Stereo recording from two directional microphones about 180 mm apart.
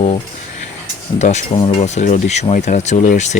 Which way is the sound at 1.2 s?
40° left (ahead or behind).